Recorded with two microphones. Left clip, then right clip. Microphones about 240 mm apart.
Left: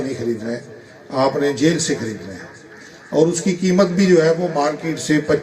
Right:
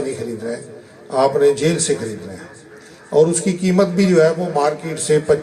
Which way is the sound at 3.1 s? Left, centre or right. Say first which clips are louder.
Right 2 dB; right.